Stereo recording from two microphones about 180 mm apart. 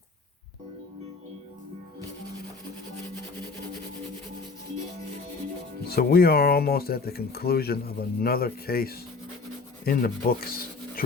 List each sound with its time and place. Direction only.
5.8 s speech: 60° left (ahead or behind)
9.8 s rub: 55° left (ahead or behind)